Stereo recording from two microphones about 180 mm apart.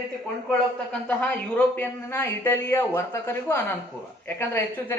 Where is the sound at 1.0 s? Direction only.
10° left (ahead or behind).